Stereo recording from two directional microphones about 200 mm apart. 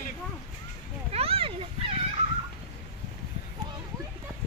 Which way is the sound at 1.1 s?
30° right (ahead or behind).